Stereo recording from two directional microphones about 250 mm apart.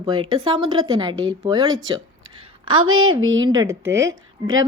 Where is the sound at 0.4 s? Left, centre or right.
Centre.